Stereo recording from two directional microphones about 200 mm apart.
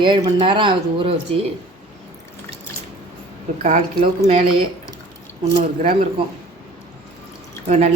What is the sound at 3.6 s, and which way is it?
Speech, 35° right (ahead or behind).